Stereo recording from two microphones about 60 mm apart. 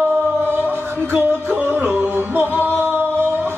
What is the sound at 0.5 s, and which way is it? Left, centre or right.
Music, right.